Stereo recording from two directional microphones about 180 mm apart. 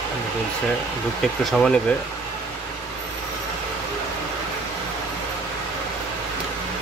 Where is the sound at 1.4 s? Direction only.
Centre (ahead or behind).